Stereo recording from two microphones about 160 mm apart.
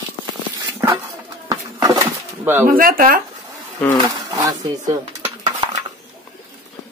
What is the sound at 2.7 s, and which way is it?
Speech, 60° right (ahead or behind).